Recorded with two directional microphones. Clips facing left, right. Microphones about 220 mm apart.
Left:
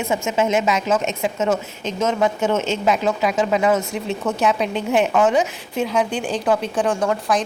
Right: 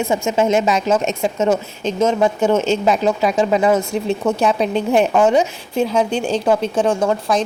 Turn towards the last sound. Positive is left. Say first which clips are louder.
# right 3 dB
turn(degrees=-25)  # may be behind; listen again after turning